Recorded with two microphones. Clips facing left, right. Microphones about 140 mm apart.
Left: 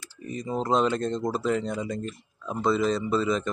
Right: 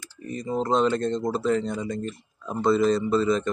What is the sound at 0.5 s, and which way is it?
Speech, 5° left (ahead or behind).